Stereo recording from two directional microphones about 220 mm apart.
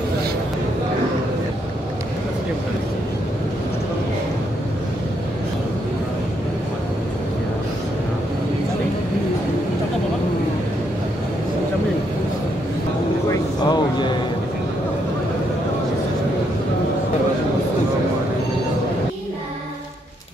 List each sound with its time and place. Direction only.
13.3 s vehicle: 20° left (ahead or behind)